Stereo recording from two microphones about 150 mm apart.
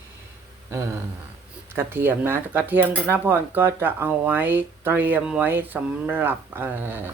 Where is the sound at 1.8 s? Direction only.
15° right (ahead or behind).